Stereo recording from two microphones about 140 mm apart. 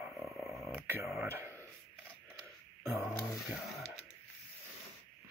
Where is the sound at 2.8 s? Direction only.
20° right (ahead or behind).